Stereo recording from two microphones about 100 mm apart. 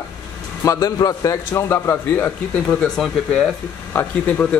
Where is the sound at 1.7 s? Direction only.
20° left (ahead or behind).